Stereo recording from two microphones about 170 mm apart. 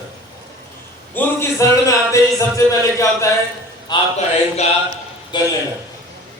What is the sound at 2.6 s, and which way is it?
A man's voice, 20° left (ahead or behind).